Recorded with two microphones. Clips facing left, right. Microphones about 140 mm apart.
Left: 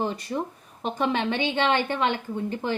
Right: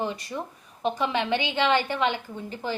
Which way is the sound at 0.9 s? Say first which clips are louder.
Left 3 dB; 50° left (ahead or behind).